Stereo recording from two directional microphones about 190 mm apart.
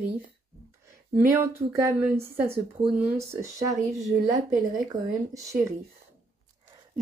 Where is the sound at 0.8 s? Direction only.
15° right (ahead or behind).